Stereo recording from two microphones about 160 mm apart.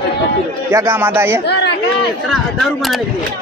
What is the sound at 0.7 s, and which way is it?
Speech, 15° right (ahead or behind).